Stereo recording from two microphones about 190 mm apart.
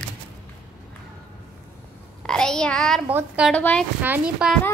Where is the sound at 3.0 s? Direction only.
5° right (ahead or behind).